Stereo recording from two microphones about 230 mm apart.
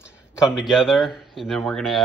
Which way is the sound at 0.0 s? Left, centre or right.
Centre.